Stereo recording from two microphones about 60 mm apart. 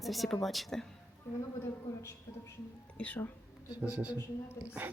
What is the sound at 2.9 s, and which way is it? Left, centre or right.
Speech, left.